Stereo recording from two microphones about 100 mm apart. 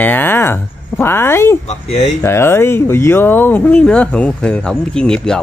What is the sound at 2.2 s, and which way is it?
Speech, 25° left (ahead or behind).